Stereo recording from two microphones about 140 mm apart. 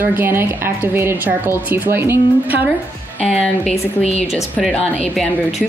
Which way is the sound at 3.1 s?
5° left (ahead or behind).